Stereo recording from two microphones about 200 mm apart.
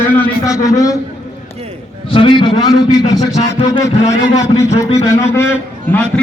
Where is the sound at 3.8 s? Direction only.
35° left (ahead or behind).